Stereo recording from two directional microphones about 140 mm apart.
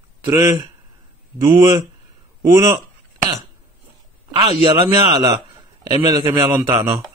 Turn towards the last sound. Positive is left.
turn(degrees=-20)  # may be behind; listen again after turning